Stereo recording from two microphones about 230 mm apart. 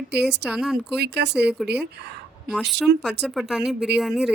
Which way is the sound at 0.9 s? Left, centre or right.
Right.